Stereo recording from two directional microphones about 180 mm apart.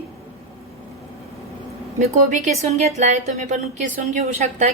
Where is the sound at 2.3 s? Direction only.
40° right (ahead or behind).